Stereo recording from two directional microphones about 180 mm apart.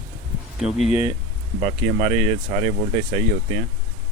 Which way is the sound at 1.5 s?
40° right (ahead or behind).